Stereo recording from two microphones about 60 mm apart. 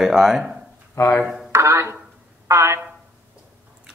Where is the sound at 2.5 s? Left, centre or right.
Right.